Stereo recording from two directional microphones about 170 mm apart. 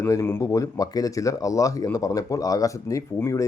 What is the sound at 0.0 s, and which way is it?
Speech, 15° left (ahead or behind).